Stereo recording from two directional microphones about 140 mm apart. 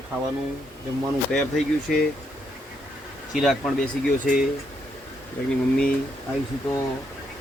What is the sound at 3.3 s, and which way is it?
Speech, centre (ahead or behind).